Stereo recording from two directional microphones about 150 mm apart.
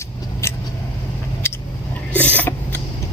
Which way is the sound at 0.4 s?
20° left (ahead or behind).